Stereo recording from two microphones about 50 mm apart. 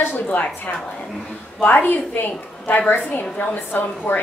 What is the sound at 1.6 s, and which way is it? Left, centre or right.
A woman's voice, left.